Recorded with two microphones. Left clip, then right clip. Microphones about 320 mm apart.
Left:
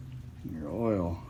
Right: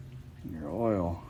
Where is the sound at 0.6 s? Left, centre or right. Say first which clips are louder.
Right 1 dB; centre.